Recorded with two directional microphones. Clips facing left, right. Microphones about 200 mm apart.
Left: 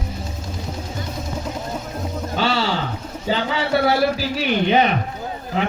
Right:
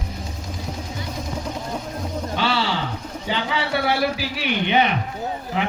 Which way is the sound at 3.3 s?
40° left (ahead or behind).